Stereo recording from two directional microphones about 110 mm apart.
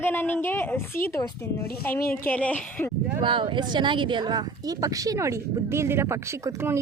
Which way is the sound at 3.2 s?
50° right (ahead or behind).